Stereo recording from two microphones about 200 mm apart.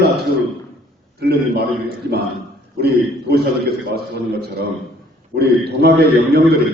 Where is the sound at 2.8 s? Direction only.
50° right (ahead or behind).